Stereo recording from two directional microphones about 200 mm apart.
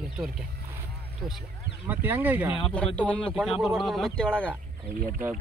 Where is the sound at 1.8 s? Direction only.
10° right (ahead or behind).